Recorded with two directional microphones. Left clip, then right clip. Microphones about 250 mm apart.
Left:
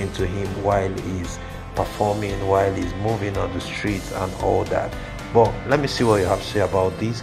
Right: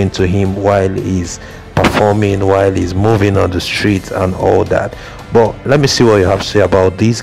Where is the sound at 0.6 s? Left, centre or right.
Right.